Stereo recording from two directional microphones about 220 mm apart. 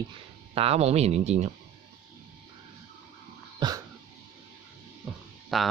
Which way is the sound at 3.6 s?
20° right (ahead or behind).